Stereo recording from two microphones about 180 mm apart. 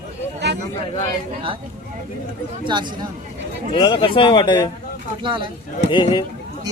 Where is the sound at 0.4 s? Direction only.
70° right (ahead or behind).